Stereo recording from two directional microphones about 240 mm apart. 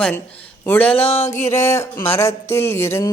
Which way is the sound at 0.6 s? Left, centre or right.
Centre.